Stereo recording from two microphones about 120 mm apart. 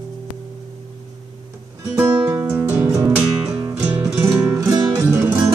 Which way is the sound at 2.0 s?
30° right (ahead or behind).